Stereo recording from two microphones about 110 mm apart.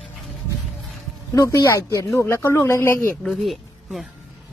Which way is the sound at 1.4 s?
30° left (ahead or behind).